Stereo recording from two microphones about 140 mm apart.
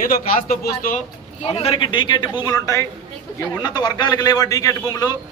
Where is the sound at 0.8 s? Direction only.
65° left (ahead or behind).